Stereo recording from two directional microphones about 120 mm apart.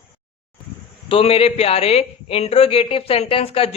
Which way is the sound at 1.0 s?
50° left (ahead or behind).